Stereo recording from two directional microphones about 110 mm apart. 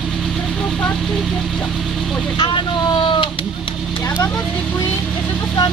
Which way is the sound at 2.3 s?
45° left (ahead or behind).